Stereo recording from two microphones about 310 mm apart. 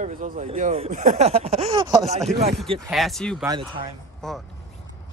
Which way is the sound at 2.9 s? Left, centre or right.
Centre.